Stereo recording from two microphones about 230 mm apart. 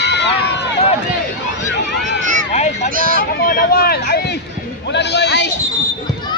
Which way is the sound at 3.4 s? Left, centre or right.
Left.